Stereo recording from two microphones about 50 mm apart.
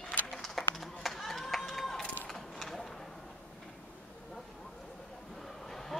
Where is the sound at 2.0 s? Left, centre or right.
Left.